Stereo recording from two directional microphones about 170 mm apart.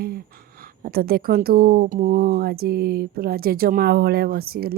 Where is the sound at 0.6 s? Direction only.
60° right (ahead or behind).